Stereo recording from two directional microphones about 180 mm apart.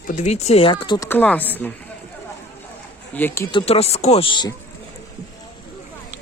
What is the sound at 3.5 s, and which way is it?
Speech, 30° left (ahead or behind).